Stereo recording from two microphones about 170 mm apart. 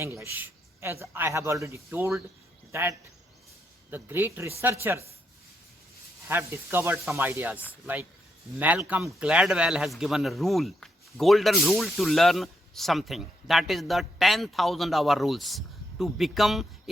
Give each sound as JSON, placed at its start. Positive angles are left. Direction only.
{"t": 0.0, "sound": "a man's voice", "side_deg": -15}
{"t": 3.9, "sound": "a man's voice", "side_deg": -10}
{"t": 6.2, "sound": "a man's voice", "side_deg": -15}